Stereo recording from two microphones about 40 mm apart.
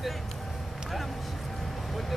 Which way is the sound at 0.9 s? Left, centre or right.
Centre.